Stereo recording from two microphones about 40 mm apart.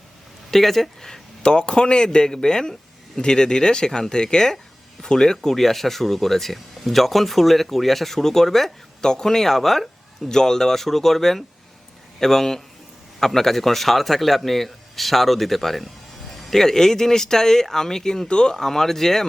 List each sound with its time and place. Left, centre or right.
0.5 s speech: centre
1.4 s speech: left; by 8.7 s centre
9.0 s speech: centre
18.5 s speech: centre